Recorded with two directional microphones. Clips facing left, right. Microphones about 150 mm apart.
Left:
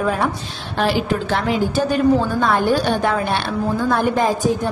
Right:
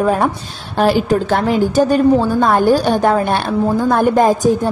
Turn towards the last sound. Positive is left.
turn(degrees=-45)  # may be behind; listen again after turning